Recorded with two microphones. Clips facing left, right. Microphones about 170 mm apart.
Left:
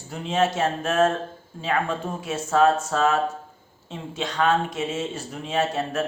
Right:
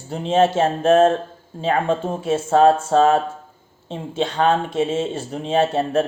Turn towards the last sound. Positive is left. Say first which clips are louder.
# right 6 dB
turn(degrees=-30)  # may be behind; listen again after turning